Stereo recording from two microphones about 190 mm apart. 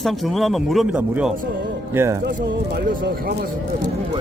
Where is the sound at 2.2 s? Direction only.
50° right (ahead or behind).